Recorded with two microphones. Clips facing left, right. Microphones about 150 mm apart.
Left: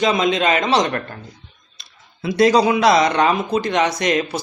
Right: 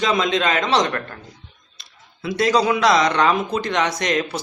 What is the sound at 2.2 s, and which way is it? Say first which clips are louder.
Speech: left 4 dB; 15° left (ahead or behind).